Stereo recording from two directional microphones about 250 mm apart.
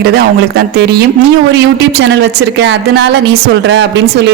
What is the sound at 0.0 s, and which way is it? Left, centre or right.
Speech, right.